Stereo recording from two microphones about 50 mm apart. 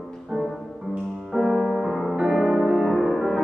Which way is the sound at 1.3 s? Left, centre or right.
Centre.